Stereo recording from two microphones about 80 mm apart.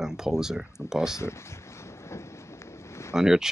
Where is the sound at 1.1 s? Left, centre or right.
Left.